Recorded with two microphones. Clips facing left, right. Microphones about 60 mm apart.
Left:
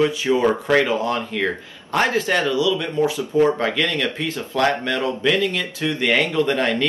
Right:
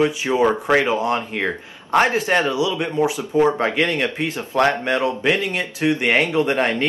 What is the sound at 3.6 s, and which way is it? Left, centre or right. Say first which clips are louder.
Speech: right 2 dB; right.